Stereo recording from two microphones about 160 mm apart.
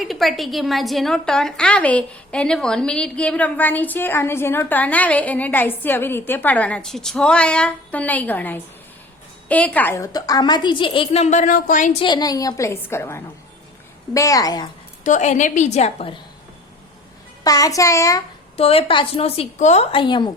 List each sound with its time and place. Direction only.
0.0 s a woman's voice: centre (ahead or behind); by 11.9 s 55° left (ahead or behind)
11.9 s a woman's voice: 25° left (ahead or behind)
15.0 s a woman's voice: 50° left (ahead or behind)
17.4 s a woman's voice: 20° left (ahead or behind)
18.5 s a woman's voice: 35° left (ahead or behind)